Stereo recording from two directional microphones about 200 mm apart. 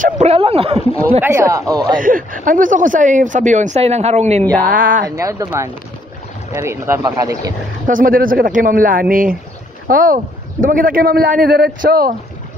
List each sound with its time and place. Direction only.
0.0 s speech: 35° right (ahead or behind)
1.2 s speech: 15° right (ahead or behind)
2.0 s speech: 45° right (ahead or behind)
4.4 s speech: 5° left (ahead or behind)
4.6 s a man's voice: 45° right (ahead or behind)
5.1 s speech: 15° right (ahead or behind)
7.8 s a man's voice: 45° right (ahead or behind)